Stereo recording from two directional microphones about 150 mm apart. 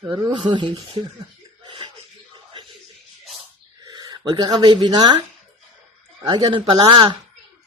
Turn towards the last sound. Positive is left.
turn(degrees=-30)  # may be behind; listen again after turning